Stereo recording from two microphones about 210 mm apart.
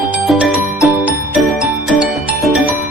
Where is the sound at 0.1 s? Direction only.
5° right (ahead or behind).